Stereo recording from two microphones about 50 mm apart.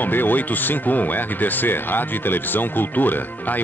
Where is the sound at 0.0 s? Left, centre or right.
Left.